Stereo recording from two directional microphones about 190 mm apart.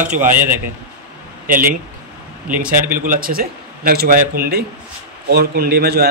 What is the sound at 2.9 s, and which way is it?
A man's voice, 45° right (ahead or behind).